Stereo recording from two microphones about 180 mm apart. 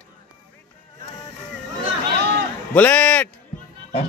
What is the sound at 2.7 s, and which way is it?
Speech, 5° left (ahead or behind).